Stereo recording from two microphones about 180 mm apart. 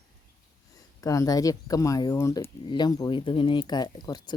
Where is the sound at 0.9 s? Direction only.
20° left (ahead or behind).